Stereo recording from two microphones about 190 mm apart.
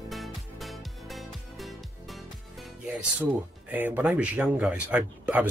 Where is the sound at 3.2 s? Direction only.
10° right (ahead or behind).